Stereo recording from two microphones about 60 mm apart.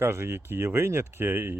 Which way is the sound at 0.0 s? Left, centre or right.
Right.